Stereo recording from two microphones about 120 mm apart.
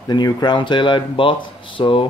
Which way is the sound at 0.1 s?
35° left (ahead or behind).